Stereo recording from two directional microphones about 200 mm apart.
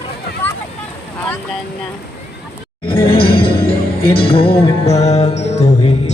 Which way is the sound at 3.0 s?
25° left (ahead or behind).